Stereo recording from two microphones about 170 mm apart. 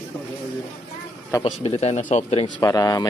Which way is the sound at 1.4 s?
35° left (ahead or behind).